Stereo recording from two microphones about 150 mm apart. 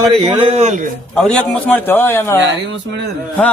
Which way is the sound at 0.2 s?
35° right (ahead or behind).